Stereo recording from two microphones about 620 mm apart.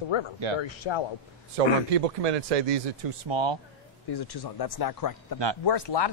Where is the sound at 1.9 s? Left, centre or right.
Right.